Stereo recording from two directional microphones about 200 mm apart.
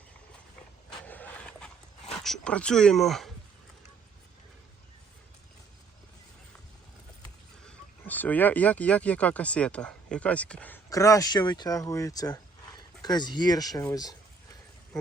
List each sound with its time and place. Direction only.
1.0 s a sound: 10° left (ahead or behind)
2.1 s speech: centre (ahead or behind)
7.6 s speech: 5° left (ahead or behind)